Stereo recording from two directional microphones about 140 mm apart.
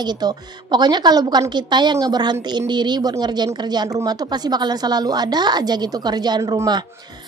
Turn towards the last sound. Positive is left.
turn(degrees=-30)  # may be behind; listen again after turning